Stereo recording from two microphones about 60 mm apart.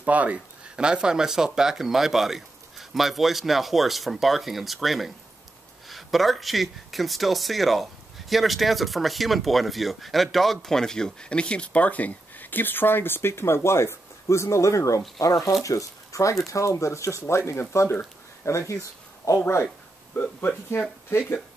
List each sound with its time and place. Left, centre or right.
0.0 s speech: right; by 19.3 s left
19.3 s speech: left